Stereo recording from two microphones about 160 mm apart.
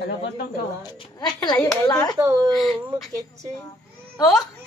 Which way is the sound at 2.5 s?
Centre (ahead or behind).